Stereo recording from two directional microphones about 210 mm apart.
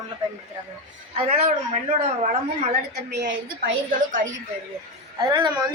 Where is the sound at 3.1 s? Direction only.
50° right (ahead or behind).